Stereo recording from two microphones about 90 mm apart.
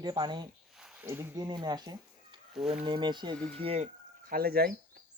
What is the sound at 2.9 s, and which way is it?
Speech, 60° right (ahead or behind).